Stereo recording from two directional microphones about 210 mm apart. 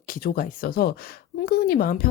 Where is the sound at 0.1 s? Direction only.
45° left (ahead or behind).